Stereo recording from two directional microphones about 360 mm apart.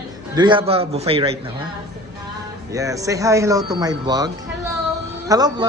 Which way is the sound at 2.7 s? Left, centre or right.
Centre.